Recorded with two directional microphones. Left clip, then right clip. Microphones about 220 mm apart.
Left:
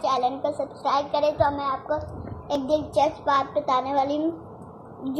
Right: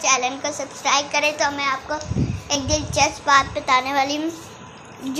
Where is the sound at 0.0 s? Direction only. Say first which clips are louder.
Right 3 dB; 25° right (ahead or behind).